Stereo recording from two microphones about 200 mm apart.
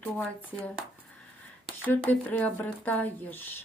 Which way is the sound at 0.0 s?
5° left (ahead or behind).